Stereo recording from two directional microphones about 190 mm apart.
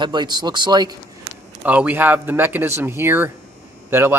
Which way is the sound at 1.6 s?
5° right (ahead or behind).